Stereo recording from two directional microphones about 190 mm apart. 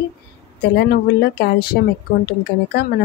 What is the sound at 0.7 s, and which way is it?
Speech, 60° left (ahead or behind).